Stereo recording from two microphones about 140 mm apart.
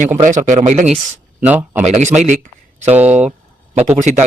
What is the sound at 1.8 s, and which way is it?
Speech, 55° right (ahead or behind).